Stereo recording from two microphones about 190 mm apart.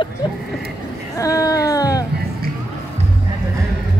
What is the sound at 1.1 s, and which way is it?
Speech, 15° left (ahead or behind).